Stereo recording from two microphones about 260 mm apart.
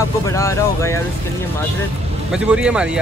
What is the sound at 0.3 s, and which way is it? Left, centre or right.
Speech, centre.